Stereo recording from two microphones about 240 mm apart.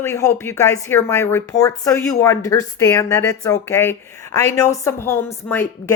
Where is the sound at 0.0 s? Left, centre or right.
Centre.